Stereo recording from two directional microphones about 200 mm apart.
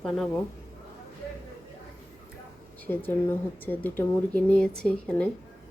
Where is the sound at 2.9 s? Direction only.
10° left (ahead or behind).